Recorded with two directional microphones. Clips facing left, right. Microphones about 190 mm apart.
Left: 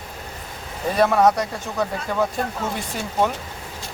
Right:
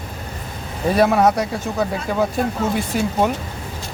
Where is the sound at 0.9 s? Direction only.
10° right (ahead or behind).